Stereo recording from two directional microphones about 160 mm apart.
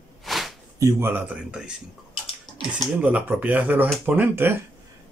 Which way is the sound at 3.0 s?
10° right (ahead or behind).